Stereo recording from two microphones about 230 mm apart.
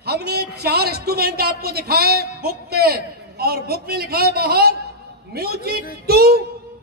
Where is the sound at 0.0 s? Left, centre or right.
Right.